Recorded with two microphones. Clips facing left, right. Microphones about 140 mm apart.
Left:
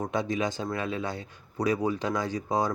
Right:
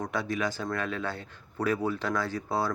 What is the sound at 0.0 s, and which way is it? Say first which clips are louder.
A man's voice: left 2 dB; 20° left (ahead or behind).